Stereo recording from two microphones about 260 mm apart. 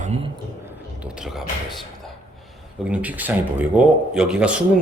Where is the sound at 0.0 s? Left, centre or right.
Right.